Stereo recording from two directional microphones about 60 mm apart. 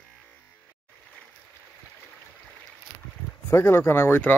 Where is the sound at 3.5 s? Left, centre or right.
Left.